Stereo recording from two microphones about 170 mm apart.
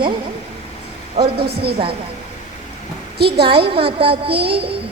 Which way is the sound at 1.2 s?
35° right (ahead or behind).